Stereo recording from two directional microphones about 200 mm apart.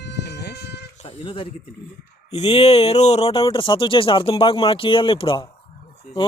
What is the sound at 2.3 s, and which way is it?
Speech, 30° left (ahead or behind).